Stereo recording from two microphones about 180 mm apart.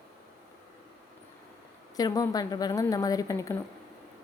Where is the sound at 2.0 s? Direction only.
20° left (ahead or behind).